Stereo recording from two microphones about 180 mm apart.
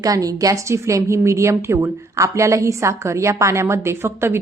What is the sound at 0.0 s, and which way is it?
A woman's voice, 20° right (ahead or behind).